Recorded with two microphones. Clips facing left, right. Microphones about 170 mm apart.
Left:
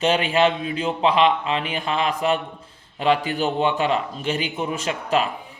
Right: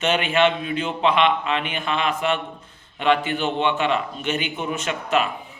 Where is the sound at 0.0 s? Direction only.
30° left (ahead or behind).